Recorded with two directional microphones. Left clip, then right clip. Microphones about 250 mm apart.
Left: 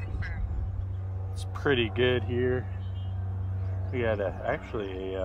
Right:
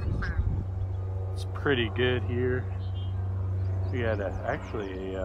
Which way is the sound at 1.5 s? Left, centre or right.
Left.